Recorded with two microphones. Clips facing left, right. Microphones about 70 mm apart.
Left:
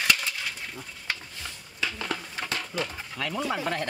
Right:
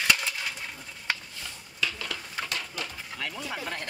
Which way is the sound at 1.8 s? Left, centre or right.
Left.